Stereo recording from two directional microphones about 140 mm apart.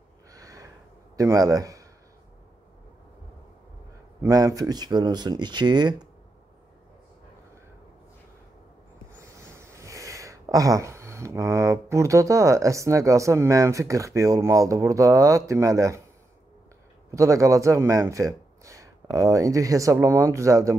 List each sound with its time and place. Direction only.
0.3 s gasp: 25° right (ahead or behind)
1.1 s a man's voice: 25° right (ahead or behind)
4.2 s speech: 25° right (ahead or behind)
9.5 s speech: 20° right (ahead or behind)
17.1 s speech: 25° right (ahead or behind)